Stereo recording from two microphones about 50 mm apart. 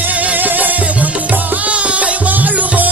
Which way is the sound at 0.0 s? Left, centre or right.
Right.